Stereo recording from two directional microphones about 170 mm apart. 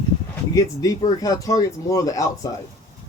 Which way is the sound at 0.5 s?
20° left (ahead or behind).